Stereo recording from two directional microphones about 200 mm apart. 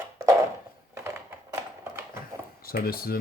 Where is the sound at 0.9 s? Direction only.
10° right (ahead or behind).